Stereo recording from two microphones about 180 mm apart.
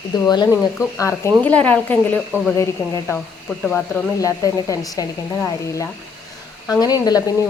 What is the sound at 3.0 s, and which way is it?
Speech, 5° left (ahead or behind).